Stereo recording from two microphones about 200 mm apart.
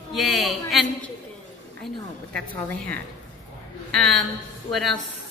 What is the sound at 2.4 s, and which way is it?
A woman's voice, 5° left (ahead or behind).